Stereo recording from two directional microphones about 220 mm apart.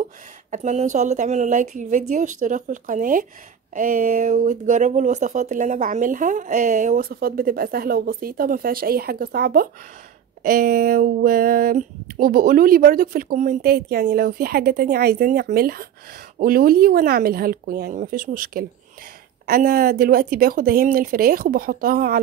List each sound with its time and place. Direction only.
0.5 s speech: 30° right (ahead or behind)